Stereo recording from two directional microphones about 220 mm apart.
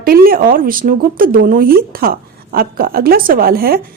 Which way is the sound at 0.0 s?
45° right (ahead or behind).